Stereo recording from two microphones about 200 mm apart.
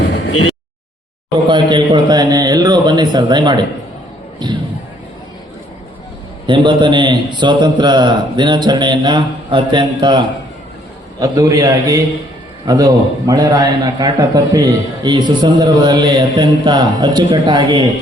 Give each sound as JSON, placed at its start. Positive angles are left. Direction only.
{"t": 0.0, "sound": "a sound", "side_deg": 60}
{"t": 1.5, "sound": "a man's voice", "side_deg": -25}
{"t": 6.5, "sound": "a man's voice", "side_deg": -25}